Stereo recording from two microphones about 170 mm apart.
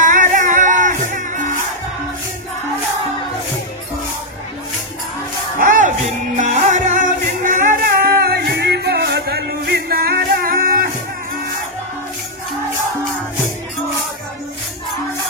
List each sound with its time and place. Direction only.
0.0 s music: 50° right (ahead or behind)
5.6 s music: 50° right (ahead or behind)
8.2 s music: 65° right (ahead or behind)